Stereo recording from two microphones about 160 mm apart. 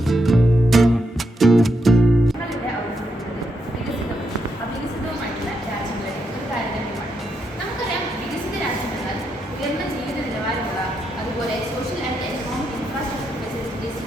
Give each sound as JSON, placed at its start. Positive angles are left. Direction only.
{"t": 0.1, "sound": "music", "side_deg": 0}